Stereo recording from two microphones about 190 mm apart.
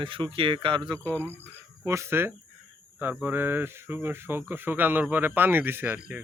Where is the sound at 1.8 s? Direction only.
15° right (ahead or behind).